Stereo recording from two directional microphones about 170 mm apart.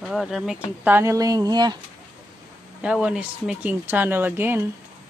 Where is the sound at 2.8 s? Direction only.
5° right (ahead or behind).